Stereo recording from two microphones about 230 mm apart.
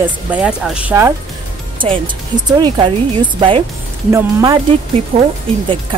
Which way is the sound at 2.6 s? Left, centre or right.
Centre.